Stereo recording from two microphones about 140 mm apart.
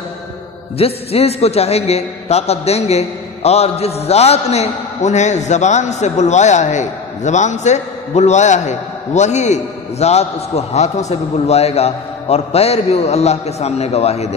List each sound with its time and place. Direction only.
0.7 s a man's voice: 45° left (ahead or behind)